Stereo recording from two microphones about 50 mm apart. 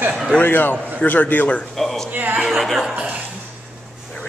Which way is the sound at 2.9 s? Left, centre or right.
Right.